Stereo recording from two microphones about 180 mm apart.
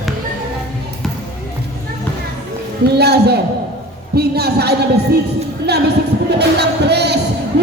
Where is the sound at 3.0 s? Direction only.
65° right (ahead or behind).